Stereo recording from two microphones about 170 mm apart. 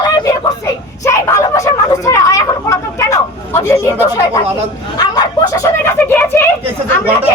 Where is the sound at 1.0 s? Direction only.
20° left (ahead or behind).